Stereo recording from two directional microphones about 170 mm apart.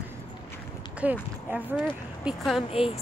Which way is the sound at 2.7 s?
35° left (ahead or behind).